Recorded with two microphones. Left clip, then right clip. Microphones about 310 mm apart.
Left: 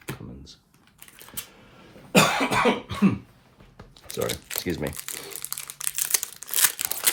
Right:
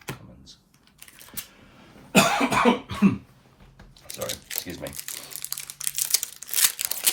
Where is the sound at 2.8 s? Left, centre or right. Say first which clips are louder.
Right 1 dB; centre.